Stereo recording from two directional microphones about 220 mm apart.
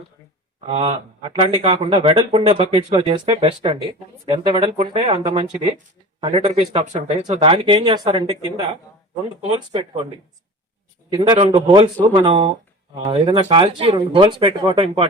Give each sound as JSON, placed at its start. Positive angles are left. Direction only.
{"t": 0.7, "sound": "speech", "side_deg": -30}
{"t": 11.1, "sound": "speech", "side_deg": -25}